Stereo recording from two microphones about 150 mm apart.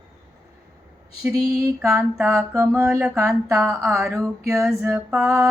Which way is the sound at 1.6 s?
20° right (ahead or behind).